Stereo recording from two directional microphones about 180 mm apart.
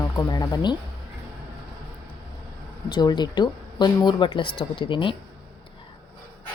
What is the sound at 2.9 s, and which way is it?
Speech, 25° left (ahead or behind).